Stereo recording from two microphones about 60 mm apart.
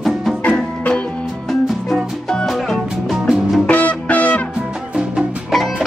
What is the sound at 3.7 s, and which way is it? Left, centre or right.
Music, left.